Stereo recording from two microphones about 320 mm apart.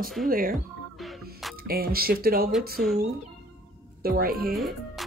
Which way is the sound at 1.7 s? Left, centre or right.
Right.